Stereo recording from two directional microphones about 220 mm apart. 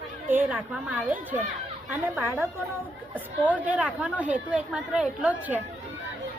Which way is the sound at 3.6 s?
5° right (ahead or behind).